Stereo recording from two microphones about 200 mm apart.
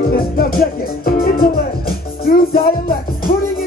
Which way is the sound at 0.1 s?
50° left (ahead or behind).